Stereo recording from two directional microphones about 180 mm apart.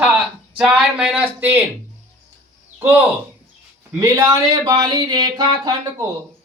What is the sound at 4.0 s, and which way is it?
Speech, 20° right (ahead or behind).